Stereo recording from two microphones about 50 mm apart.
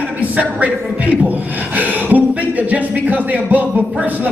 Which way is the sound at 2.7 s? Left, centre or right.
Right.